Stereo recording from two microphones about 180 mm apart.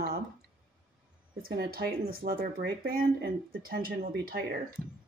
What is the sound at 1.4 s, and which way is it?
Speech, 60° right (ahead or behind).